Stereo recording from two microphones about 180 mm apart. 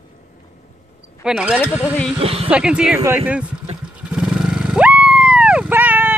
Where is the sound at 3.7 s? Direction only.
35° right (ahead or behind).